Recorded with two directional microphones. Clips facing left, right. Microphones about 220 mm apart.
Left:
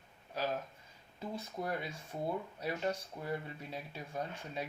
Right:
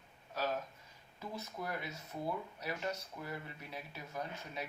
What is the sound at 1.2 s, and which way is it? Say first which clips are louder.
Speech: left 3 dB; 25° left (ahead or behind).